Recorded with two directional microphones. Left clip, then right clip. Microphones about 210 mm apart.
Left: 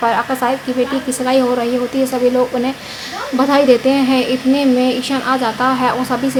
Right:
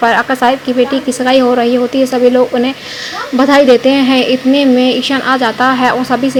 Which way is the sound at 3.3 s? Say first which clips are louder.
Right 5 dB; 20° right (ahead or behind).